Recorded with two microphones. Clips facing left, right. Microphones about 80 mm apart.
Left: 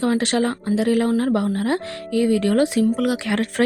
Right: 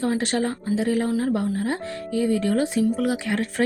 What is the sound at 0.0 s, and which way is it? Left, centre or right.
A woman's voice, left.